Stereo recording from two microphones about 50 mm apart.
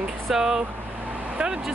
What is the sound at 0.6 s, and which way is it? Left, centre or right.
Vehicle, right.